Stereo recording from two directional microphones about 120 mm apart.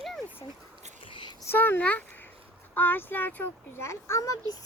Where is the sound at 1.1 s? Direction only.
40° left (ahead or behind).